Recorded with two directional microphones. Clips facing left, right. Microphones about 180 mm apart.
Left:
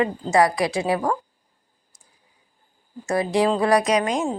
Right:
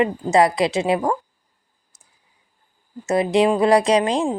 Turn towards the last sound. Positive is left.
turn(degrees=-30)  # may be behind; listen again after turning